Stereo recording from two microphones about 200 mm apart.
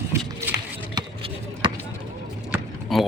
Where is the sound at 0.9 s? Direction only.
25° right (ahead or behind).